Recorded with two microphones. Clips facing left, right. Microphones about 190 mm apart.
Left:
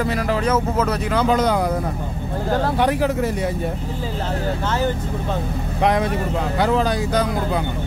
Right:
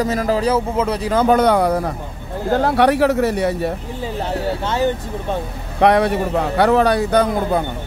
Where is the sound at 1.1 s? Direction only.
55° right (ahead or behind).